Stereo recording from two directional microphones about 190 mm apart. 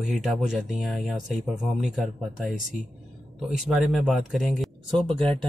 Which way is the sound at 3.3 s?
Centre (ahead or behind).